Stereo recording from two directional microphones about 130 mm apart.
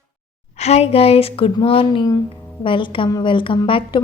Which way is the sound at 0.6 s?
55° left (ahead or behind).